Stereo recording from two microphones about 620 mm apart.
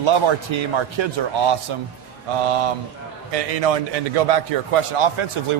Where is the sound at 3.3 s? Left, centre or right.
Right.